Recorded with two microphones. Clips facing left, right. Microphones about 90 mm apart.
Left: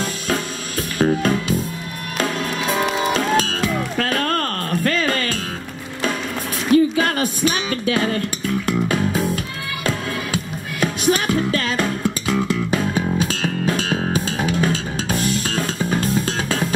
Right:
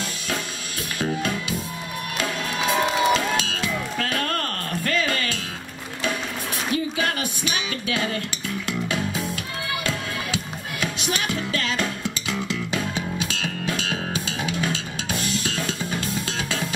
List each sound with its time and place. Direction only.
0.9 s music: 40° left (ahead or behind)
3.1 s music: 40° left (ahead or behind)
6.7 s music: 40° left (ahead or behind)